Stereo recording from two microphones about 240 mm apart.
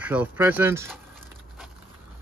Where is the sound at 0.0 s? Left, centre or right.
Centre.